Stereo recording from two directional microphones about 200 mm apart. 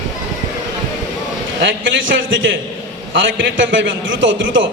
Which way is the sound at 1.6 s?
65° right (ahead or behind).